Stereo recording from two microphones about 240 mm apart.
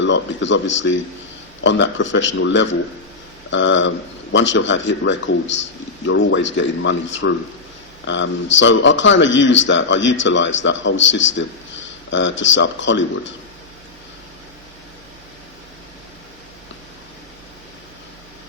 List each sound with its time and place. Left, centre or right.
0.0 s speech: left